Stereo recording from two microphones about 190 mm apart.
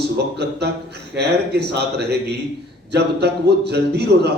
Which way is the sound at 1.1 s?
60° right (ahead or behind).